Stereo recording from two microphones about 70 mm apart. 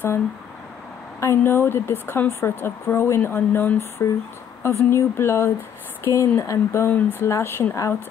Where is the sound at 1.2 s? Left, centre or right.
Left.